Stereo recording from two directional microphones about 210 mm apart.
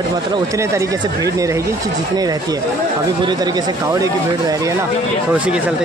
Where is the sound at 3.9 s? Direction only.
15° right (ahead or behind).